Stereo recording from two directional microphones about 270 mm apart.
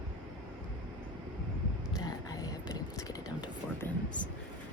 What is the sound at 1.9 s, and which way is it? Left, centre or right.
Whispering, centre.